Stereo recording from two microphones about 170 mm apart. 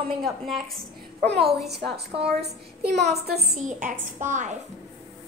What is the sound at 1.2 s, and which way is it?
Speech, 85° right.